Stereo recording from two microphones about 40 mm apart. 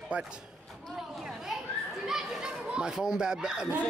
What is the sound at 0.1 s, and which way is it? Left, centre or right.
Speech, right.